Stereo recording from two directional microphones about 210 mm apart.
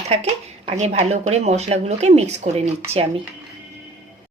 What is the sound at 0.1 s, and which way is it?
Speech, 30° right (ahead or behind).